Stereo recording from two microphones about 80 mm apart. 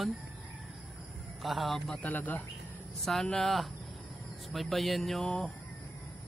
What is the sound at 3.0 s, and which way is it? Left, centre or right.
A man's voice, centre.